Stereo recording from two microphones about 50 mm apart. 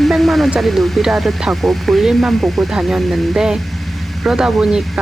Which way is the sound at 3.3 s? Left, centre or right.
Centre.